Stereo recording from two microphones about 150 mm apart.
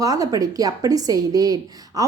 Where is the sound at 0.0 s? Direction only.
25° right (ahead or behind).